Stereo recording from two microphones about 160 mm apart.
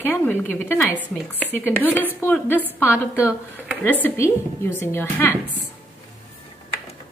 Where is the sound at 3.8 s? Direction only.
10° left (ahead or behind).